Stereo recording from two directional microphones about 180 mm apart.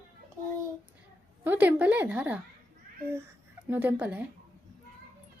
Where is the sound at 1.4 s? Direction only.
10° right (ahead or behind).